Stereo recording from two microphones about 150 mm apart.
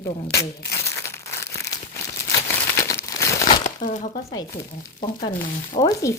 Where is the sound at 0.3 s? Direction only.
20° left (ahead or behind).